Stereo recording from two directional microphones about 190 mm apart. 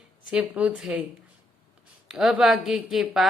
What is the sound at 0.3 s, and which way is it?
Speech, 5° right (ahead or behind).